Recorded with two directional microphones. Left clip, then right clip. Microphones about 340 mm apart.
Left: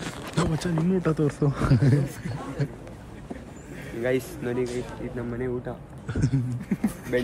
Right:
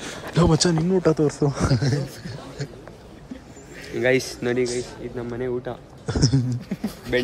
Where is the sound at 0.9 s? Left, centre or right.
Centre.